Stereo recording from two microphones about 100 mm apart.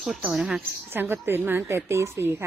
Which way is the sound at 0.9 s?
20° right (ahead or behind).